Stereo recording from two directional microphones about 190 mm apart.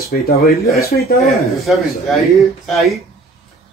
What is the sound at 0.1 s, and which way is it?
Speech, 55° left (ahead or behind).